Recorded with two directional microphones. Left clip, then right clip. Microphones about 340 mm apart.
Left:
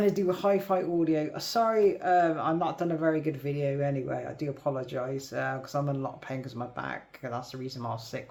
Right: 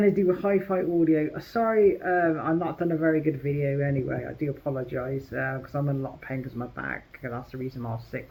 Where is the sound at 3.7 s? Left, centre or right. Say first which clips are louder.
Even; left.